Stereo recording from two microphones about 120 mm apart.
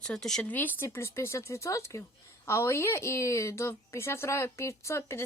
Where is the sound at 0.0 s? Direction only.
5° left (ahead or behind).